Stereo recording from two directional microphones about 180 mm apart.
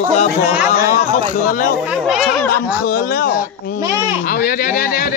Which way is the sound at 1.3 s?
50° left (ahead or behind).